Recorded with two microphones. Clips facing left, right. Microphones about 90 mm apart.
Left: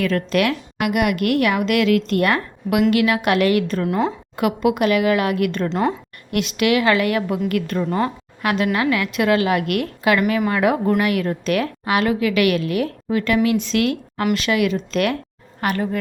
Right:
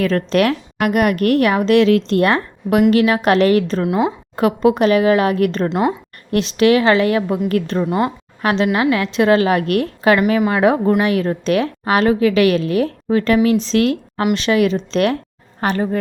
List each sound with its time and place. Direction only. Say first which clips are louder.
0.0 s a woman's voice: right 3 dB; 35° right (ahead or behind)
3.8 s a woman's voice: right 3 dB; 15° right (ahead or behind)
4.4 s a woman's voice: right 4 dB; 35° right (ahead or behind)
5.6 s a woman's voice: right 1 dB; 15° right (ahead or behind)
6.3 s a woman's voice: right 5 dB; 30° right (ahead or behind)
7.9 s a woman's voice: right 3 dB; 15° right (ahead or behind)
8.4 s a woman's voice: right 3 dB; 30° right (ahead or behind)